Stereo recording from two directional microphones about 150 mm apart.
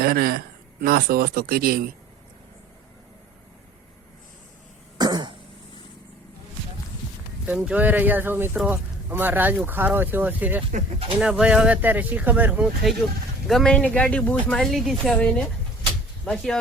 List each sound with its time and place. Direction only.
0.0 s speech: 90° right
4.9 s throat clearing: 30° right (ahead or behind)
7.4 s speech: 10° right (ahead or behind)
13.5 s speech: 5° left (ahead or behind)